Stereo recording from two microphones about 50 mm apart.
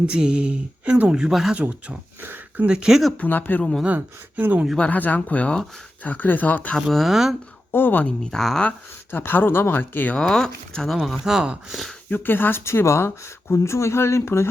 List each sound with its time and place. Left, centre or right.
0.0 s speech: centre
1.5 s speech: right
2.2 s speech: right
2.6 s speech: centre
3.2 s speech: left
3.9 s speech: right
4.9 s speech: left
6.9 s speech: centre
7.7 s speech: left
8.2 s speech: centre
9.1 s speech: left
10.2 s speech: centre
10.8 s speech: centre
12.0 s speech: left